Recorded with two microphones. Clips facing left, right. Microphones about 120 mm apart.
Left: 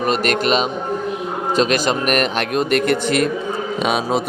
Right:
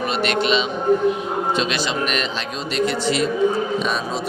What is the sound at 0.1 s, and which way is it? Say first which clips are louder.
A man's voice: left 2 dB; 45° left (ahead or behind).